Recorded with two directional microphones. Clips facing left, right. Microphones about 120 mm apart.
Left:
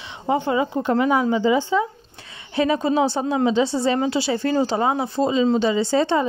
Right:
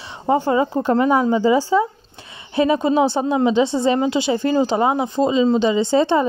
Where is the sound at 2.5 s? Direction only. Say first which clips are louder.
Right 3 dB; 25° right (ahead or behind).